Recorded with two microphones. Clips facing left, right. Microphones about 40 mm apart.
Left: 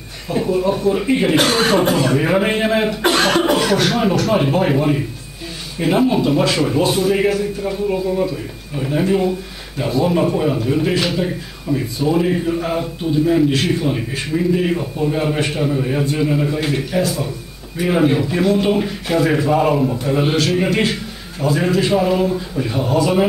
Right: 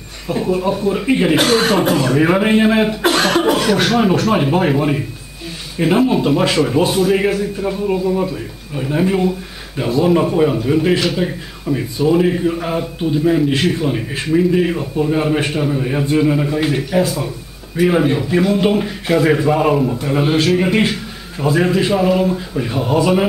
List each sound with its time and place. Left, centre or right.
0.3 s a man's voice: centre
6.2 s a man's voice: centre
6.5 s a man's voice: centre